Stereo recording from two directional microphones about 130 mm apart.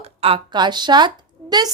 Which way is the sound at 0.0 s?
45° right (ahead or behind).